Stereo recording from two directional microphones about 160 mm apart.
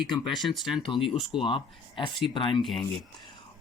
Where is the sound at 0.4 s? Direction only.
Centre (ahead or behind).